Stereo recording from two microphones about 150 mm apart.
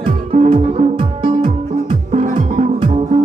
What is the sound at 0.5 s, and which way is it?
Music, 35° right (ahead or behind).